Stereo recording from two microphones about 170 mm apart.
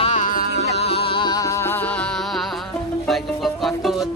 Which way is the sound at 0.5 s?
35° left (ahead or behind).